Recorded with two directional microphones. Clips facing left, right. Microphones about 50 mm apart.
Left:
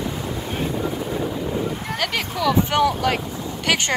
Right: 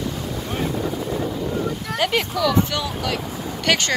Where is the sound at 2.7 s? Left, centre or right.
Left.